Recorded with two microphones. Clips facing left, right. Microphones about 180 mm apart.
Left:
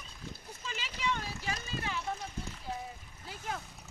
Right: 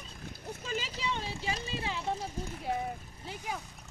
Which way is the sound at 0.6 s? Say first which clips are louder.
Even; 40° right (ahead or behind).